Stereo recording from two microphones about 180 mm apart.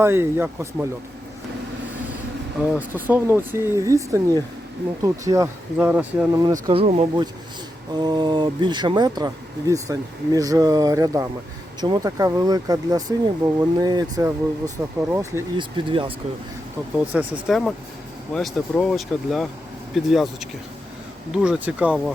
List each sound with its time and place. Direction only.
0.0 s speech: 15° right (ahead or behind)
2.6 s speech: 10° right (ahead or behind)
6.4 s speech: 25° right (ahead or behind)
15.5 s speech: 30° right (ahead or behind)
17.1 s speech: 10° right (ahead or behind)
18.3 s speech: centre (ahead or behind)